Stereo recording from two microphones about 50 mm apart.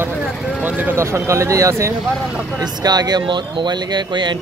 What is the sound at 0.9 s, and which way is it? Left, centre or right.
Speech, right.